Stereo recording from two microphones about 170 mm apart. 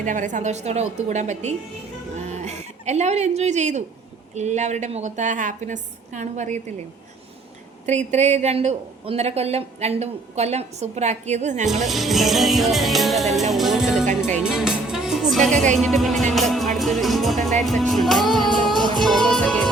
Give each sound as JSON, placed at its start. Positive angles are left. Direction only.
{"t": 0.0, "sound": "a woman's voice", "side_deg": -50}
{"t": 2.1, "sound": "a sound", "side_deg": -40}
{"t": 4.4, "sound": "a woman's voice", "side_deg": -45}
{"t": 7.9, "sound": "speech", "side_deg": -40}
{"t": 11.9, "sound": "music", "side_deg": 0}